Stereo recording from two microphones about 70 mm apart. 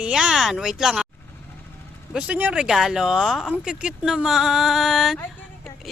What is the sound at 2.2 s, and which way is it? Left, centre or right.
Speech, right.